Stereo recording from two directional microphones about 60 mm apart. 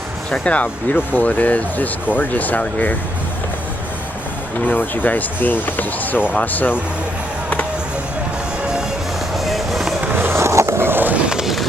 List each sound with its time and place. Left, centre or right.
0.4 s speech: left
4.6 s speech: left
9.3 s music: centre
10.0 s skateboard: right
11.3 s a sound: centre